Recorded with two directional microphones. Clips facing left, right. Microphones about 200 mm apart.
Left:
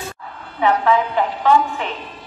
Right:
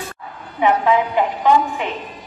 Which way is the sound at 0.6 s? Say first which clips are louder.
Right 1 dB; 15° right (ahead or behind).